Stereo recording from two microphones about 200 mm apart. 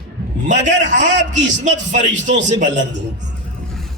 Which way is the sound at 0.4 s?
40° right (ahead or behind).